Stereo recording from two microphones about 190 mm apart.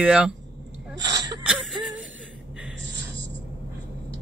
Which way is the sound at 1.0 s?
20° right (ahead or behind).